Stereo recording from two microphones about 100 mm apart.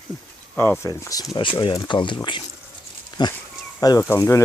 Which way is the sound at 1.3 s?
55° left (ahead or behind).